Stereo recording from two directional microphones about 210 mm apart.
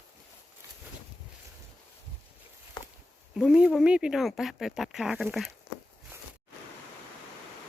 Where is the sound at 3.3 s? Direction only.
5° right (ahead or behind).